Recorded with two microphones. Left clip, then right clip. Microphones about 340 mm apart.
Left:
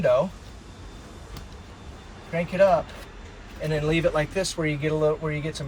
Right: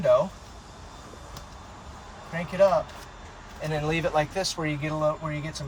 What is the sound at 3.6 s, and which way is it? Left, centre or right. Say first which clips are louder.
Speech: left 4 dB; centre.